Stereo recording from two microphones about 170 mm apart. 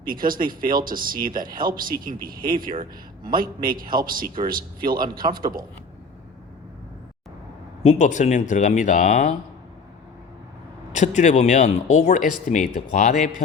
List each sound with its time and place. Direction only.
0.1 s speech: 55° right (ahead or behind)
3.7 s speech: 55° right (ahead or behind)
4.8 s a man's voice: 25° right (ahead or behind)
7.8 s speech: 45° left (ahead or behind)
10.9 s speech: 45° left (ahead or behind)